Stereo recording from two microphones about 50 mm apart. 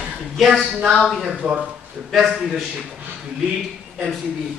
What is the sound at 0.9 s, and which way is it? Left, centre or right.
Speech, centre.